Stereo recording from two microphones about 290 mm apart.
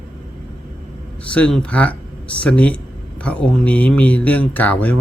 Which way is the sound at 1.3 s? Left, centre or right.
Centre.